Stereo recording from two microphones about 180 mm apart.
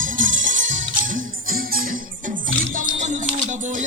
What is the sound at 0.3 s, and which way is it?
Music, 90° right.